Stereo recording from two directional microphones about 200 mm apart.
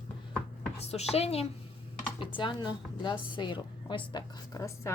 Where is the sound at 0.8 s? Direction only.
30° left (ahead or behind).